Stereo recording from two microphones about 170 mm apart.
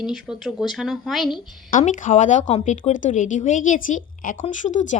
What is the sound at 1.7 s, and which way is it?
A woman's voice, 50° left (ahead or behind).